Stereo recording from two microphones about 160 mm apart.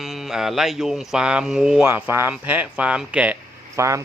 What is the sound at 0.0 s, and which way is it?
Speech, centre (ahead or behind).